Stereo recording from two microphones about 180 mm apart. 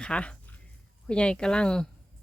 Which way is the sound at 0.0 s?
5° left (ahead or behind).